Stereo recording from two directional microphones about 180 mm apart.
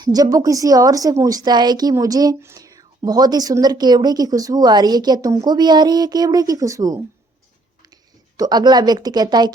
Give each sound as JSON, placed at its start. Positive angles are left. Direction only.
{"t": 0.0, "sound": "a woman's voice", "side_deg": -20}
{"t": 8.4, "sound": "a woman's voice", "side_deg": -25}